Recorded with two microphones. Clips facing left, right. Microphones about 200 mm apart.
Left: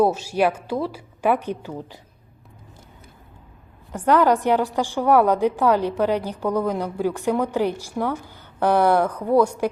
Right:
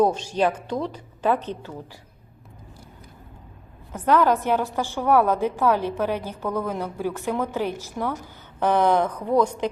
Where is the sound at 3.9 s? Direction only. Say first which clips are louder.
Left 2 dB; 10° left (ahead or behind).